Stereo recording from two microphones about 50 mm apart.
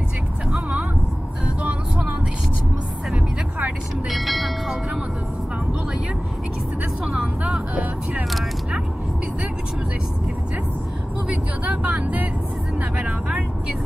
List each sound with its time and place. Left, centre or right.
1.6 s vehicle: right
4.1 s music: centre
7.1 s vehicle: right
8.1 s single-lens reflex camera: centre
11.2 s vehicle: right